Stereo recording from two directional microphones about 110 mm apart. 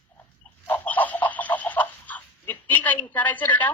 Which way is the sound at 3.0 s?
15° left (ahead or behind).